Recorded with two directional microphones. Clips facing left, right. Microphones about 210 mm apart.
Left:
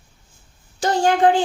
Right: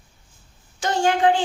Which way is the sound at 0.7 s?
35° left (ahead or behind).